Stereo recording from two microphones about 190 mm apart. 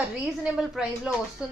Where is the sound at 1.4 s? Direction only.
5° right (ahead or behind).